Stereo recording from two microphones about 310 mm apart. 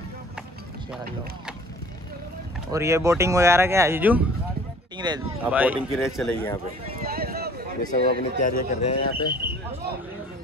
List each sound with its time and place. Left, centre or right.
2.7 s speech: centre
7.0 s a sound: right
7.9 s speech: left